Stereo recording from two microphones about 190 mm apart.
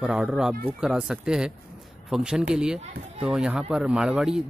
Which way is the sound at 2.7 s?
35° right (ahead or behind).